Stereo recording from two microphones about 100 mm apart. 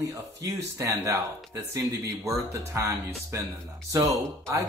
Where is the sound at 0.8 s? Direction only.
30° right (ahead or behind).